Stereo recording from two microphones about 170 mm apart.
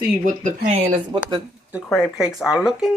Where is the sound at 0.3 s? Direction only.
50° right (ahead or behind).